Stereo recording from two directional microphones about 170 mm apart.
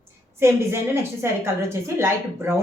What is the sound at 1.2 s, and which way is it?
A woman's voice, 15° right (ahead or behind).